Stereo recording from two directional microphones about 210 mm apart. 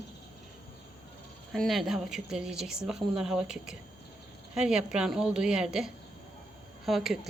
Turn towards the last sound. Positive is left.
turn(degrees=0)  # may be behind; listen again after turning